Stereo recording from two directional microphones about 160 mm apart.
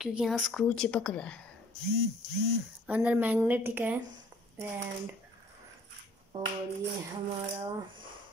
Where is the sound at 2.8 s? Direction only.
10° right (ahead or behind).